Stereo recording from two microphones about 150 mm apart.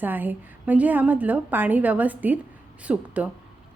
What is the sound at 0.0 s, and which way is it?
A woman's voice, 10° right (ahead or behind).